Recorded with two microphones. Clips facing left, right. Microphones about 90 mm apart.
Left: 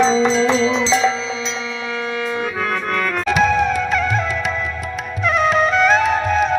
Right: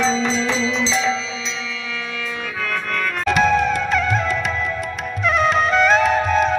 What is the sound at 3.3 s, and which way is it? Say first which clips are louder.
Music: even; centre (ahead or behind).